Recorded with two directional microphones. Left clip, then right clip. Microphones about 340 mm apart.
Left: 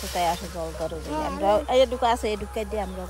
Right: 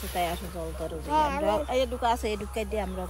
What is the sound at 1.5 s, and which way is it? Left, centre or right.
Speech, centre.